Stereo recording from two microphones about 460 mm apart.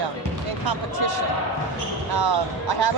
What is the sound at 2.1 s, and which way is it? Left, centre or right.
Speech, right.